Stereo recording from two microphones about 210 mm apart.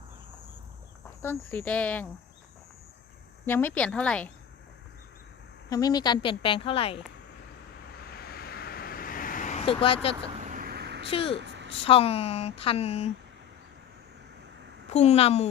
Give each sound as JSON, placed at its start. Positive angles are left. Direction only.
{"t": 1.2, "sound": "speech", "side_deg": 10}
{"t": 3.4, "sound": "a woman's voice", "side_deg": 10}
{"t": 5.6, "sound": "a woman's voice", "side_deg": 15}
{"t": 8.0, "sound": "a sound", "side_deg": 45}
{"t": 10.3, "sound": "vehicle", "side_deg": -35}
{"t": 11.1, "sound": "a woman's voice", "side_deg": 25}
{"t": 11.4, "sound": "a sound", "side_deg": -55}
{"t": 11.9, "sound": "a woman's voice", "side_deg": 30}
{"t": 14.8, "sound": "a woman's voice", "side_deg": 30}